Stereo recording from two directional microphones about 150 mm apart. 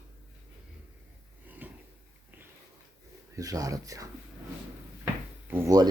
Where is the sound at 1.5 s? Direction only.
10° right (ahead or behind).